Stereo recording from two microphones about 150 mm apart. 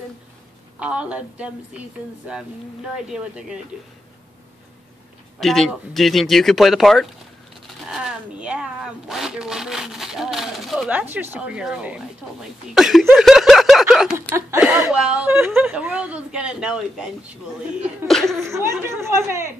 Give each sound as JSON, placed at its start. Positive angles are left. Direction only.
{"t": 0.7, "sound": "a woman's voice", "side_deg": -10}
{"t": 3.1, "sound": "speech", "side_deg": -5}
{"t": 5.4, "sound": "speech", "side_deg": 0}
{"t": 13.1, "sound": "snicker", "side_deg": 0}
{"t": 14.6, "sound": "a woman's voice", "side_deg": -10}
{"t": 18.4, "sound": "a woman's voice", "side_deg": -20}